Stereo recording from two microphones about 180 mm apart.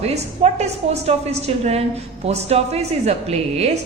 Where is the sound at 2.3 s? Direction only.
35° right (ahead or behind).